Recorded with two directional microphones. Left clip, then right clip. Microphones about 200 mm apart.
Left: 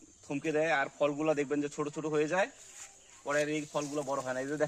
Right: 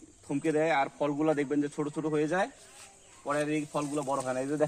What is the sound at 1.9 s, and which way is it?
Speech, 30° left (ahead or behind).